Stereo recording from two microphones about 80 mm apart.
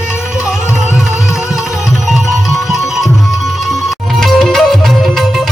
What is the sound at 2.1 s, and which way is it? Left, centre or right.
Music, centre.